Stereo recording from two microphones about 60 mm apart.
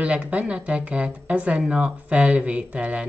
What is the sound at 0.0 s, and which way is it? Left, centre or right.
Speech, right.